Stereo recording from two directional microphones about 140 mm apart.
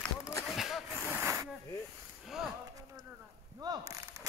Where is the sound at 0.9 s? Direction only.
15° right (ahead or behind).